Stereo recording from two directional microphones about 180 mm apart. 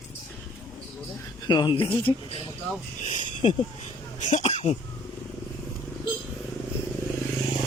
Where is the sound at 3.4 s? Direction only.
30° left (ahead or behind).